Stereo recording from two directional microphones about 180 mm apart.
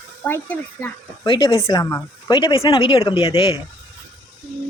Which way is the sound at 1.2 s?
25° left (ahead or behind).